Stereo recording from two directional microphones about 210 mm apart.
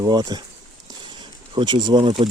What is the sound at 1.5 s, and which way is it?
Speech, 20° right (ahead or behind).